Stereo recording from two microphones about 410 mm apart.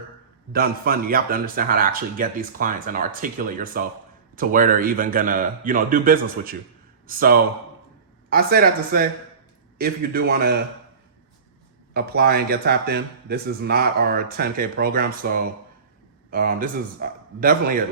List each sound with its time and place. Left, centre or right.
0.5 s speech: right
11.9 s speech: right